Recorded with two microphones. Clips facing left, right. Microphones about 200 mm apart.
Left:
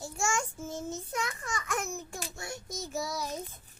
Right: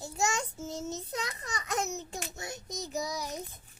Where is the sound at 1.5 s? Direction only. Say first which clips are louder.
Right 1 dB; 20° right (ahead or behind).